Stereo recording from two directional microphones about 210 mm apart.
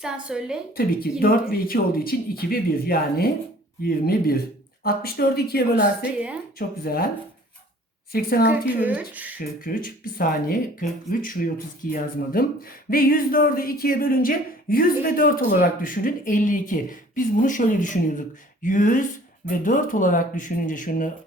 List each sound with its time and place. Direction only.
0.0 s a woman's voice: 5° right (ahead or behind)
0.8 s speech: 45° left (ahead or behind)
8.1 s speech: 45° left (ahead or behind)
8.8 s speech: 5° right (ahead or behind)
9.4 s speech: 40° left (ahead or behind)